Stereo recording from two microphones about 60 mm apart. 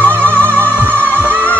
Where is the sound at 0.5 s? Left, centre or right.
Right.